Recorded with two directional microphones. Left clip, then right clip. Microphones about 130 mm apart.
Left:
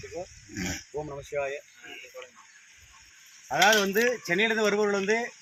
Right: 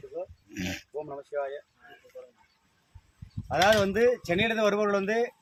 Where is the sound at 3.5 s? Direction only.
40° right (ahead or behind).